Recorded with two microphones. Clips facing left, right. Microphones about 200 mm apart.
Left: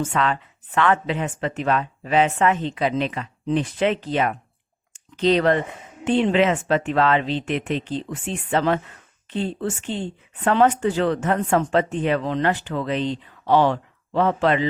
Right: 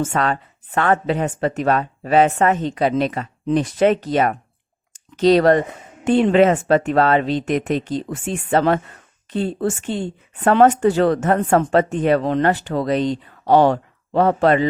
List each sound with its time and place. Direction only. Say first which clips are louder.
0.0 s speech: right 2 dB; 45° right (ahead or behind)